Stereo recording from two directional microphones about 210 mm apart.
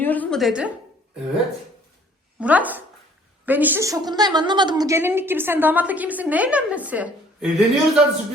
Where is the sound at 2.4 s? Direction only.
5° right (ahead or behind).